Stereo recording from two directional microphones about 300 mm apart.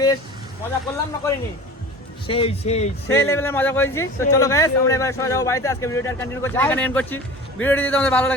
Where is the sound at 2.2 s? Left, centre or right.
Centre.